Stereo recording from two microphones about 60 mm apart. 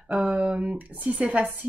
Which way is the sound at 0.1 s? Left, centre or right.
Centre.